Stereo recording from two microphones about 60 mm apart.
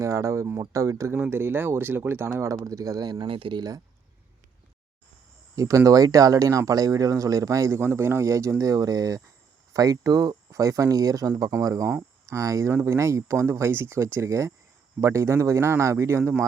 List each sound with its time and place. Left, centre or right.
0.0 s speech: right
1.3 s speech: right
2.4 s speech: right
5.5 s speech: right
7.8 s speech: right